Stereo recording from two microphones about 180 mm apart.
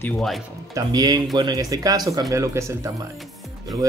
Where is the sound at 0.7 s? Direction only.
20° right (ahead or behind).